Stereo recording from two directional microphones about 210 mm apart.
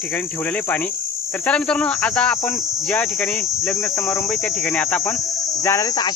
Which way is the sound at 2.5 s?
Centre (ahead or behind).